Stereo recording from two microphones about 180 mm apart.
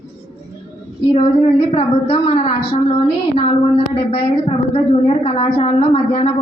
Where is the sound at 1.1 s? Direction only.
35° left (ahead or behind).